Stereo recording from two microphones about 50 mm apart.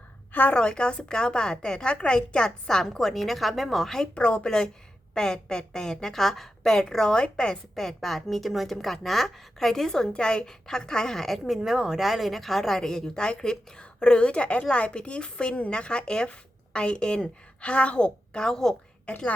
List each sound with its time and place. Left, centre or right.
0.5 s a woman's voice: centre
4.1 s a woman's voice: left
11.4 s a woman's voice: centre
19.0 s a woman's voice: left